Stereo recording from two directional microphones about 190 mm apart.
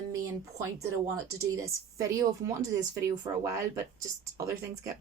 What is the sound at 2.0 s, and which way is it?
Speech, 15° right (ahead or behind).